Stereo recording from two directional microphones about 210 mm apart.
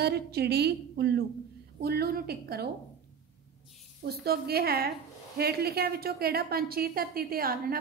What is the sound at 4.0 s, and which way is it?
A woman's voice, 50° right (ahead or behind).